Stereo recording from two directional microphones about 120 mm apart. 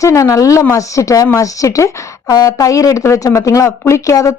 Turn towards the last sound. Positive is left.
turn(degrees=25)  # may be behind; listen again after turning